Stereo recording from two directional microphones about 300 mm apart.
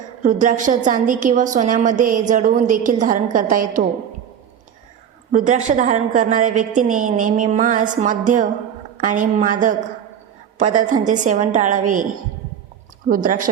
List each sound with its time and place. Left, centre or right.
0.2 s a woman's voice: right
5.3 s a woman's voice: right
13.1 s a woman's voice: right